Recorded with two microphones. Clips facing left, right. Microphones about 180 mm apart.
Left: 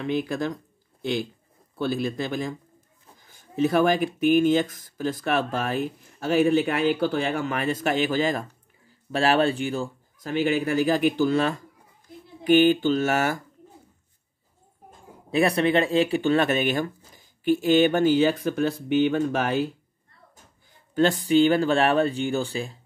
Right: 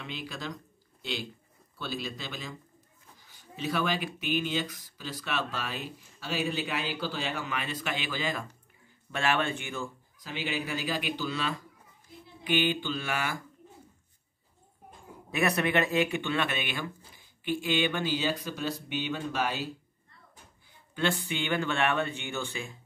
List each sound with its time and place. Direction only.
0.0 s speech: 50° left (ahead or behind)
1.8 s speech: 50° left (ahead or behind); by 9.8 s 35° left (ahead or behind)
10.2 s speech: 50° left (ahead or behind)
15.3 s speech: 30° left (ahead or behind); by 19.7 s 55° left (ahead or behind)
20.9 s speech: 40° left (ahead or behind)